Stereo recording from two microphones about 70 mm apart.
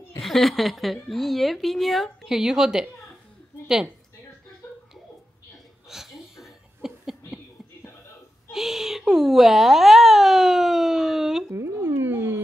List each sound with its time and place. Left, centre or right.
0.2 s a woman's voice: centre
5.9 s laughter: centre
8.5 s a sound: centre
11.5 s dog: right